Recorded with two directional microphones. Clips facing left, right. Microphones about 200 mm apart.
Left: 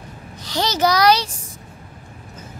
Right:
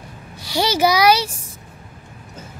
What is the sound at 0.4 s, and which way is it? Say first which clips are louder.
A child's voice: right 2 dB; 10° right (ahead or behind).